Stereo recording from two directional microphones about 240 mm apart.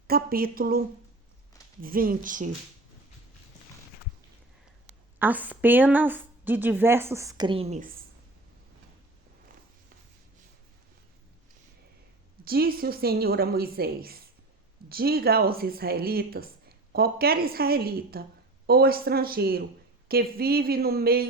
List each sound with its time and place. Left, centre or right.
0.1 s speech: right
5.2 s a woman's voice: centre; by 7.9 s right
12.5 s speech: right